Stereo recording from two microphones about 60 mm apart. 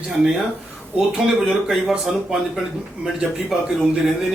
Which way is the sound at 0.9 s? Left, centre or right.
Centre.